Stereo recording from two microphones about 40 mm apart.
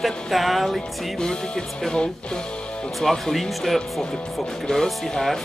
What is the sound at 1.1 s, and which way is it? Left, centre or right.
Music, centre.